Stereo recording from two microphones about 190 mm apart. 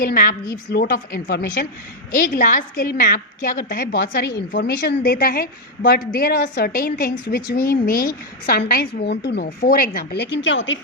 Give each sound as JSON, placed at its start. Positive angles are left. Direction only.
{"t": 0.0, "sound": "a woman's voice", "side_deg": 50}